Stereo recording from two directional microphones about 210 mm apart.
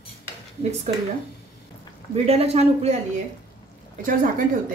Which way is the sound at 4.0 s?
40° right (ahead or behind).